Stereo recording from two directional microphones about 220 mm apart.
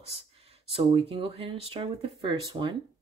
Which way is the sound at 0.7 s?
25° right (ahead or behind).